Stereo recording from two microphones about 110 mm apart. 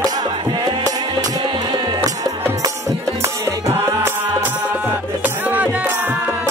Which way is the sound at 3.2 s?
25° right (ahead or behind).